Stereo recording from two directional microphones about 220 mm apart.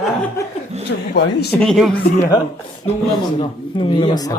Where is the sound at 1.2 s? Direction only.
55° left (ahead or behind).